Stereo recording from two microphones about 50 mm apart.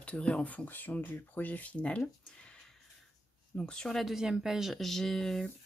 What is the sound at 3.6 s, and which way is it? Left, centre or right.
Speech, centre.